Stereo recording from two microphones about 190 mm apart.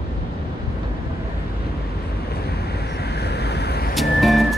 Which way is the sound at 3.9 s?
Centre (ahead or behind).